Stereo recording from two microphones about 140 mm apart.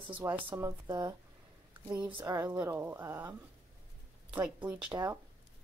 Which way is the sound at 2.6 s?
15° right (ahead or behind).